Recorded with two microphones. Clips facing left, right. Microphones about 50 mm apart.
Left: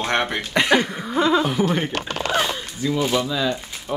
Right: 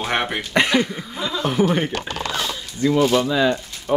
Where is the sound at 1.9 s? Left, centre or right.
Left.